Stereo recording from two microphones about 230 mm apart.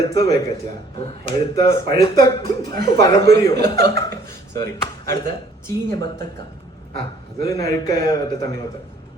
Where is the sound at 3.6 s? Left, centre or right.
Right.